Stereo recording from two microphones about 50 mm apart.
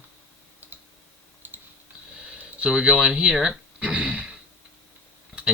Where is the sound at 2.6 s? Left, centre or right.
Centre.